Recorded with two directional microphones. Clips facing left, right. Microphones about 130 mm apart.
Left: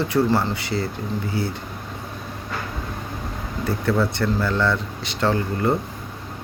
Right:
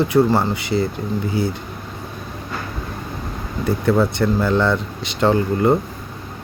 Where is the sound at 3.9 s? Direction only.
15° right (ahead or behind).